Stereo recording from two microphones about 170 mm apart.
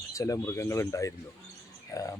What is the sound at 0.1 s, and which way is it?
Speech, 20° left (ahead or behind).